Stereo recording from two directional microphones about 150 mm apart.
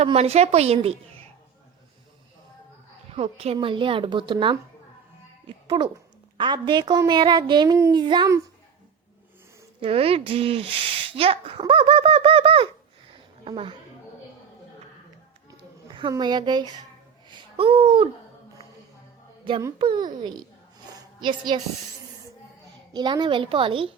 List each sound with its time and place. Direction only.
0.0 s speech: 45° right (ahead or behind)
3.2 s a child's voice: 40° right (ahead or behind)
7.0 s child singing: 30° right (ahead or behind)
9.8 s speech: 40° right (ahead or behind)
15.5 s a sound: 35° right (ahead or behind)
17.2 s babbling: 40° right (ahead or behind)
19.8 s speech: 30° right (ahead or behind)
20.9 s a sound: 30° right (ahead or behind)
22.9 s speech: 30° right (ahead or behind)